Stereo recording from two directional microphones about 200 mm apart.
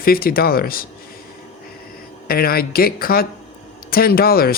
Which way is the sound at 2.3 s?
50° left (ahead or behind).